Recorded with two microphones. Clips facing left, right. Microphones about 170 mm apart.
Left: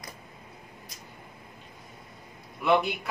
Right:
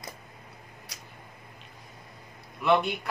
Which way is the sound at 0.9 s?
75° right (ahead or behind).